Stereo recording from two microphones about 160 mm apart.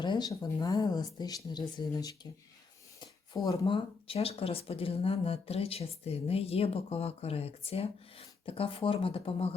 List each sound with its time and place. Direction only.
0.0 s speech: 25° left (ahead or behind)